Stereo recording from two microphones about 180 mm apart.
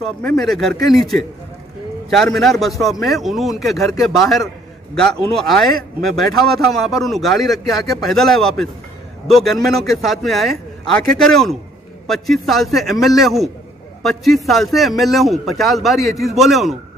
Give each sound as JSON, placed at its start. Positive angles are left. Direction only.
{"t": 0.0, "sound": "a man's voice", "side_deg": 5}
{"t": 6.0, "sound": "a man's voice", "side_deg": 0}